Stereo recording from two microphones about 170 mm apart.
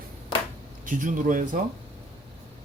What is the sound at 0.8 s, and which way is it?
Speech, 50° right (ahead or behind).